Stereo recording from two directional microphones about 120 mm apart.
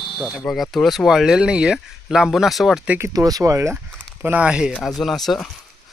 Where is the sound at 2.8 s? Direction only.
20° right (ahead or behind).